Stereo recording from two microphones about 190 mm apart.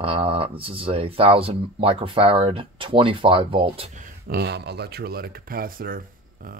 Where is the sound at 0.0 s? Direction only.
30° right (ahead or behind).